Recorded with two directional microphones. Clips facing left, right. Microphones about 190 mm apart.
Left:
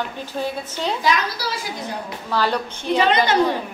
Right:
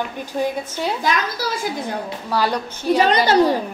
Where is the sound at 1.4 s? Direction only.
50° right (ahead or behind).